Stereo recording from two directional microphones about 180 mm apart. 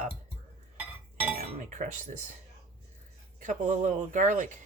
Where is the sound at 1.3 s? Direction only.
45° right (ahead or behind).